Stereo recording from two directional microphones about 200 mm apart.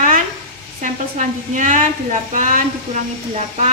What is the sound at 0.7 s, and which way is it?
A woman's voice, 40° right (ahead or behind).